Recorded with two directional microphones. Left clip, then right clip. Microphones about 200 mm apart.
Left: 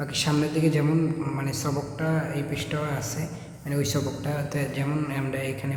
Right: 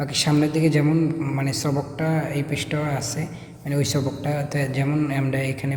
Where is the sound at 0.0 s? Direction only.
25° right (ahead or behind).